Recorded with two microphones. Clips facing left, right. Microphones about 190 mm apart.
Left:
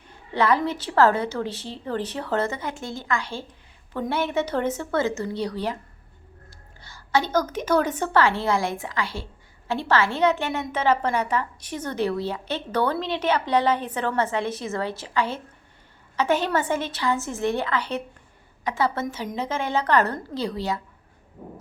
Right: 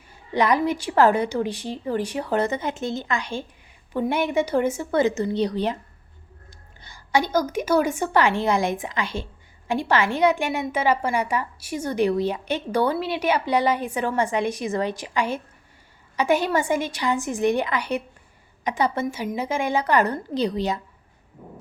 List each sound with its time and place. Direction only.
0.3 s a woman's voice: 15° right (ahead or behind)